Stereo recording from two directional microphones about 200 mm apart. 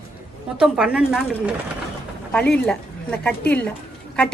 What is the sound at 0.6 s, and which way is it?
Speech, 5° right (ahead or behind).